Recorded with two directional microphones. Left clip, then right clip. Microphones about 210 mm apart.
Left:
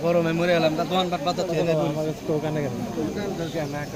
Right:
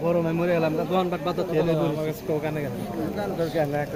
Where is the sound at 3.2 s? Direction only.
55° right (ahead or behind).